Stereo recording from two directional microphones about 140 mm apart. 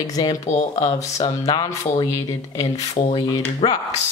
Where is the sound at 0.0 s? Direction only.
25° left (ahead or behind).